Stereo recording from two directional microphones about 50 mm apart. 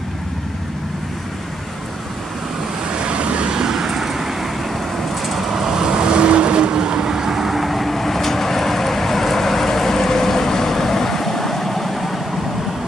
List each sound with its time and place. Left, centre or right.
2.9 s vehicle: right
3.6 s vehicle: centre